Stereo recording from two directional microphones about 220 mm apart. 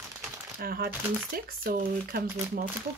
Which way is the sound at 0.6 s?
40° right (ahead or behind).